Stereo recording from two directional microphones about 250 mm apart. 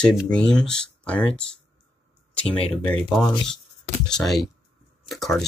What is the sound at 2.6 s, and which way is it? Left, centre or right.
Speech, left.